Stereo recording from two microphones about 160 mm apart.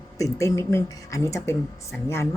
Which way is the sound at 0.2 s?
20° left (ahead or behind).